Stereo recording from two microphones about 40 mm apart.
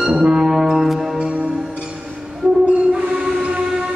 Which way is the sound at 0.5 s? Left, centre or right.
Centre.